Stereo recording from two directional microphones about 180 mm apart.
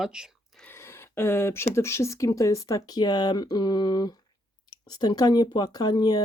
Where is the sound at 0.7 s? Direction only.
15° left (ahead or behind).